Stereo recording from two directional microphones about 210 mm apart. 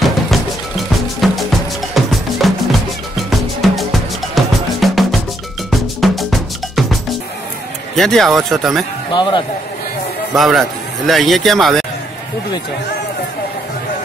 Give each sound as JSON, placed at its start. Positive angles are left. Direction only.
{"t": 0.0, "sound": "music", "side_deg": 0}
{"t": 5.7, "sound": "cowbell", "side_deg": 0}
{"t": 7.9, "sound": "speech", "side_deg": 0}
{"t": 9.1, "sound": "speech", "side_deg": 20}
{"t": 10.3, "sound": "speech", "side_deg": 0}